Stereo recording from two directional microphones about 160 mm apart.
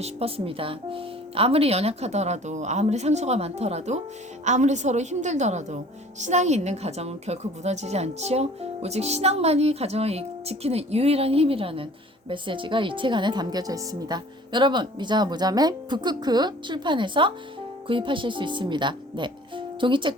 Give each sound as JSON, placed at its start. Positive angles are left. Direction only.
{"t": 0.0, "sound": "a woman's voice", "side_deg": -40}